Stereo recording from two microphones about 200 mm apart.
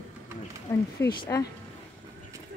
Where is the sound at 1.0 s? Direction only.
15° left (ahead or behind).